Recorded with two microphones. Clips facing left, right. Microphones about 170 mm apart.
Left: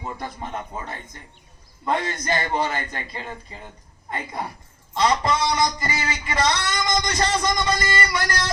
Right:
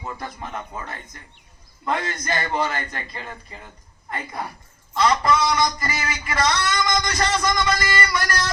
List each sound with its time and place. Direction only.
0.0 s a man's voice: 20° left (ahead or behind)